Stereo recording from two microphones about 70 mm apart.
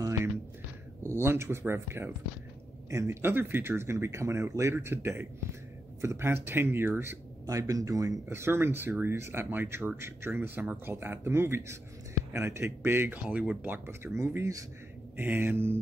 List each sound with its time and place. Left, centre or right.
1.0 s speech: right
7.4 s speech: right
8.3 s speech: right
13.1 s speech: right
13.8 s speech: right
15.1 s speech: right